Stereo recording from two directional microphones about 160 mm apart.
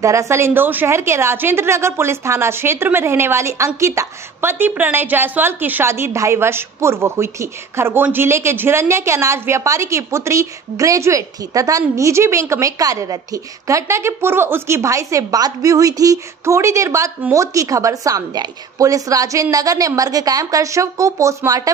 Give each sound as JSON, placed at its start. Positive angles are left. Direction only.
{"t": 0.0, "sound": "a woman's voice", "side_deg": -20}